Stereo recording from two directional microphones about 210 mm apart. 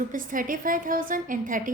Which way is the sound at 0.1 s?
40° right (ahead or behind).